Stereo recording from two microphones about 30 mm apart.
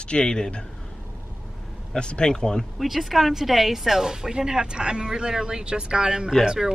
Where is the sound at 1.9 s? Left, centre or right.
Left.